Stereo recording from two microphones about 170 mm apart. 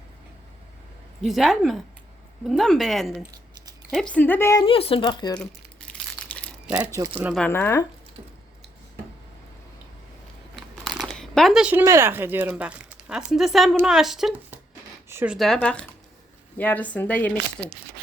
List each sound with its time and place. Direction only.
1.2 s speech: centre (ahead or behind)
4.1 s speech: 10° left (ahead or behind)
4.6 s speech: 35° left (ahead or behind)
5.9 s crushing: 5° left (ahead or behind)
6.7 s speech: 5° right (ahead or behind)
7.3 s speech: 10° left (ahead or behind)
10.5 s crumpling: centre (ahead or behind)
11.9 s speech: 15° right (ahead or behind)
15.5 s speech: 5° left (ahead or behind)